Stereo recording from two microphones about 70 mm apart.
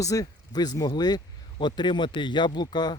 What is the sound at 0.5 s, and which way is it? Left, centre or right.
Speech, left.